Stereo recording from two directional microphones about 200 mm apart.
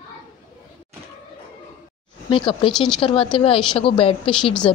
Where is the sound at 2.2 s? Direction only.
25° left (ahead or behind).